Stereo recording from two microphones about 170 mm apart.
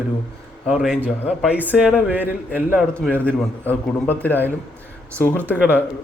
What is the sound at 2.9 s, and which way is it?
A man's voice, 5° left (ahead or behind).